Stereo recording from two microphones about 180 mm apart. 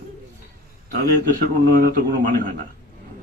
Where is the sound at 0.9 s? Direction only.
50° right (ahead or behind).